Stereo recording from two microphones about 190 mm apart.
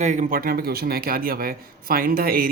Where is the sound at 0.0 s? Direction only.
40° right (ahead or behind).